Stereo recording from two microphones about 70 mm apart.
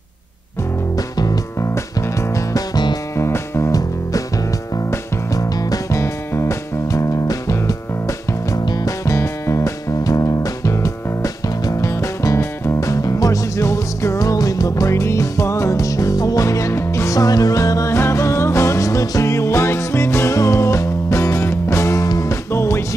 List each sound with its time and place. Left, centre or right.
0.9 s music: left
1.6 s music: left
3.2 s music: left
5.3 s music: left
17.9 s music: left
22.5 s music: left